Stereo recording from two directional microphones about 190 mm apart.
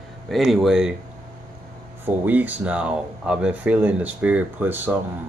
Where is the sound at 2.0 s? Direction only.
10° right (ahead or behind).